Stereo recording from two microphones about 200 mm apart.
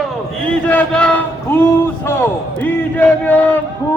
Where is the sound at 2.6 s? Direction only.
10° left (ahead or behind).